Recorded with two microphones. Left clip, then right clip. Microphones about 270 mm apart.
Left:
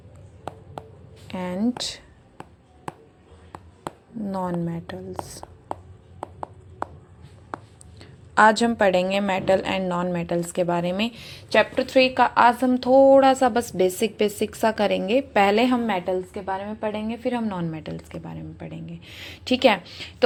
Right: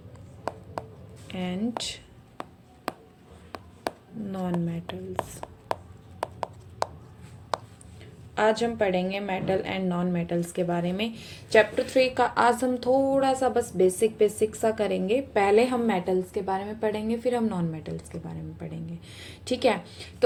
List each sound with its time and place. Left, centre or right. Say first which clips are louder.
1.3 s speech: left 4 dB; left
3.5 s a sound: right 1 dB; right
4.3 s a woman's voice: left 4 dB; centre
8.4 s a woman's voice: left 7 dB; left